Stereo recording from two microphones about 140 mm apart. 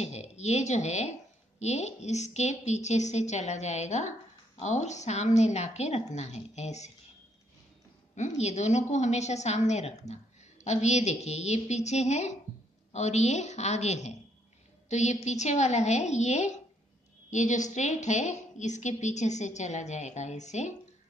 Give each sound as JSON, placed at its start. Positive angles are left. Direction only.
{"t": 0.0, "sound": "a woman's voice", "side_deg": 50}
{"t": 8.4, "sound": "a woman's voice", "side_deg": 55}